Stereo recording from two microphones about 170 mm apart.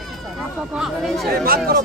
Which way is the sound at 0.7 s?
Centre (ahead or behind).